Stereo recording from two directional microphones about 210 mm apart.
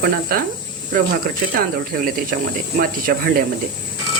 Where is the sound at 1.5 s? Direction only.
45° right (ahead or behind).